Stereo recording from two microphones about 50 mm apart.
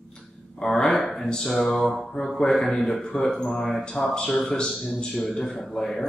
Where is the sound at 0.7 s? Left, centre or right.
Centre.